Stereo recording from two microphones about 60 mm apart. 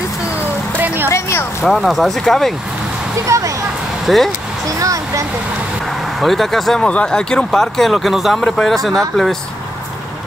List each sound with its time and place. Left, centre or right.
0.7 s a sound: right
1.6 s speech: centre
3.3 s speech: right
4.0 s speech: centre
4.7 s speech: right
6.2 s speech: centre
6.8 s speech: centre
8.4 s speech: centre
8.6 s speech: centre